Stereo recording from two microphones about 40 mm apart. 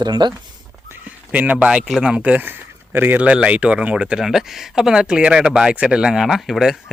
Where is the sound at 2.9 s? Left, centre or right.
Right.